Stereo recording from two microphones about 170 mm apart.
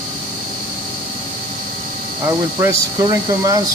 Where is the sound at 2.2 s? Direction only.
15° right (ahead or behind).